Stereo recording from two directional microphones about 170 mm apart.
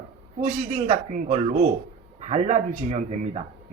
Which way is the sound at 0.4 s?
50° right (ahead or behind).